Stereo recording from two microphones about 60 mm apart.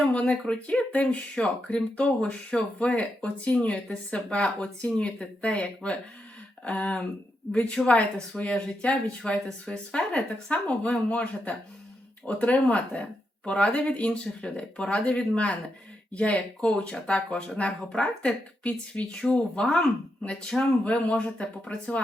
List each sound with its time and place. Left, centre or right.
0.1 s speech: centre